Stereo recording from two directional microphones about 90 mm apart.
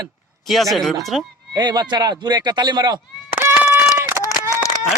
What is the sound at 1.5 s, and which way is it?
Speech, 50° right (ahead or behind).